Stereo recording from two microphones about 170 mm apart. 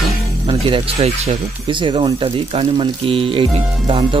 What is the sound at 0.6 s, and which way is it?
Speech, 30° right (ahead or behind).